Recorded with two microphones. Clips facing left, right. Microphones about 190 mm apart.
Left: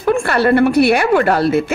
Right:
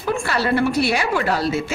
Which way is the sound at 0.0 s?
60° left (ahead or behind).